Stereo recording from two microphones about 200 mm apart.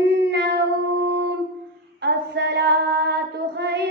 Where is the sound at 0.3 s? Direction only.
60° right (ahead or behind).